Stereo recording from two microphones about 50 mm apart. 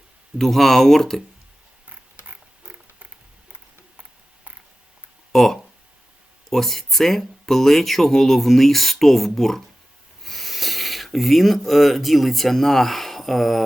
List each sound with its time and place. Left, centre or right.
0.3 s speech: centre
2.3 s a sound: right
5.3 s speech: centre